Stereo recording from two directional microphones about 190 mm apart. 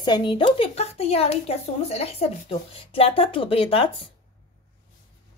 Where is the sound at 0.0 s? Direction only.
25° left (ahead or behind).